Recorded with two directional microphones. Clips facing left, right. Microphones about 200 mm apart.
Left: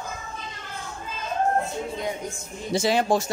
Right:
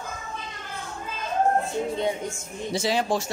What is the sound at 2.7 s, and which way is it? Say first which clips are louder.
Speech: left 3 dB; 50° left (ahead or behind).